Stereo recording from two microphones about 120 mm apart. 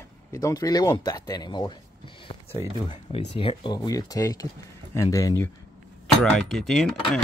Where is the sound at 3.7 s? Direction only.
30° left (ahead or behind).